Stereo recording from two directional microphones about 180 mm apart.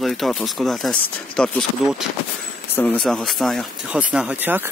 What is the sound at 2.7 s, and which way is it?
Speech, 5° left (ahead or behind).